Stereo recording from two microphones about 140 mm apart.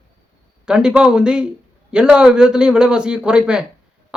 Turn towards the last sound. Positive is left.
turn(degrees=-5)  # may be behind; listen again after turning